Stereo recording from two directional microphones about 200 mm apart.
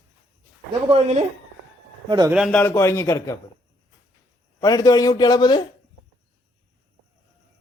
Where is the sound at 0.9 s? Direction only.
30° right (ahead or behind).